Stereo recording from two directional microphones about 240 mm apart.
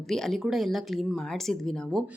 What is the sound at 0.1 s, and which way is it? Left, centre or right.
A woman's voice, centre.